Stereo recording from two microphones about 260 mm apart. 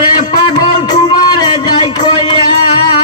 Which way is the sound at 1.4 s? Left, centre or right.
Centre.